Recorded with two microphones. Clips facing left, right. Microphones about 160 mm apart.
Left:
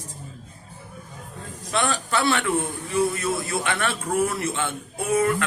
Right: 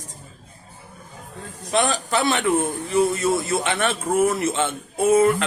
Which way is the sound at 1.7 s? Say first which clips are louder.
Right 3 dB; 20° right (ahead or behind).